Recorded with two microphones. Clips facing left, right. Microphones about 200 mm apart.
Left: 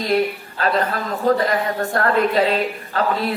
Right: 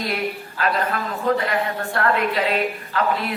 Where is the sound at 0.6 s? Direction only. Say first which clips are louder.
Left 2 dB; 35° left (ahead or behind).